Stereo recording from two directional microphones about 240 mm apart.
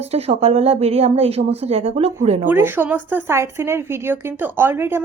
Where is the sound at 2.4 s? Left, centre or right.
Centre.